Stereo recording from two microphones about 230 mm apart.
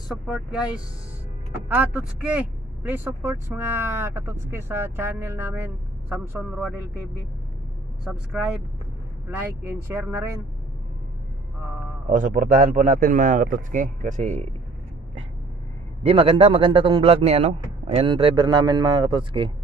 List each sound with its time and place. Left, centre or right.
0.1 s speech: centre
8.0 s speech: centre
12.1 s a man's voice: right
16.1 s a man's voice: right